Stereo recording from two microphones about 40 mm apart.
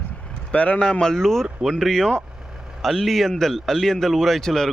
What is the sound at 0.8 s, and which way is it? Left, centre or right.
Speech, left.